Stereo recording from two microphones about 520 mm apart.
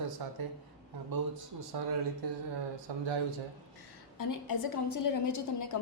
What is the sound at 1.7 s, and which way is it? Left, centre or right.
Speech, right.